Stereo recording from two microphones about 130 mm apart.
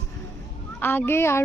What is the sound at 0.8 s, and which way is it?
Speech, 15° left (ahead or behind).